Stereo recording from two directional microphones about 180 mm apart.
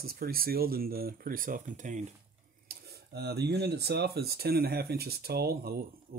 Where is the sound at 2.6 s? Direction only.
60° right (ahead or behind).